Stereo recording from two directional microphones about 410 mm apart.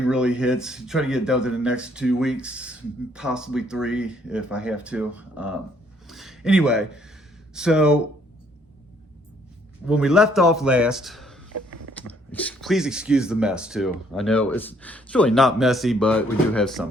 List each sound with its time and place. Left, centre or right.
0.1 s speech: centre
9.8 s speech: centre
11.5 s creak: right
12.0 s speech: centre